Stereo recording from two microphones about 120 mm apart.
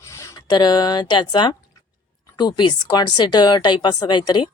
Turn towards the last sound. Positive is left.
turn(degrees=40)  # may be behind; listen again after turning